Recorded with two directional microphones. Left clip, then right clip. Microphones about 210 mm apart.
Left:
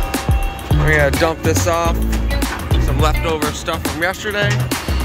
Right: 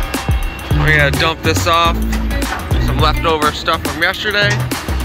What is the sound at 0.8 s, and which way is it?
Speech, 20° left (ahead or behind).